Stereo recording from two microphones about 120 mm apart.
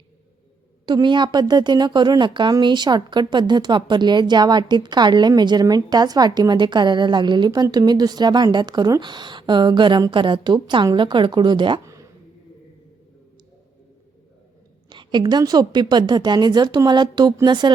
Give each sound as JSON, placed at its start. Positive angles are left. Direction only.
{"t": 0.9, "sound": "speech", "side_deg": -40}
{"t": 14.8, "sound": "speech", "side_deg": -40}